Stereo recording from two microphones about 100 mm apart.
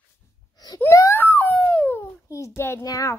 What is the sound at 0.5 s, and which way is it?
Wail, 40° left (ahead or behind).